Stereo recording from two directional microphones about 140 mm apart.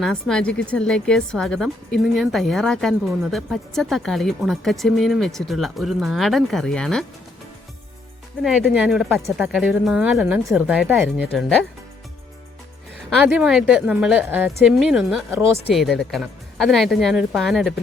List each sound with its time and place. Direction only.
0.0 s a woman's voice: 5° left (ahead or behind)
8.4 s a woman's voice: 5° right (ahead or behind)
13.1 s a woman's voice: centre (ahead or behind)
15.3 s speech: 15° right (ahead or behind)
15.7 s a woman's voice: centre (ahead or behind)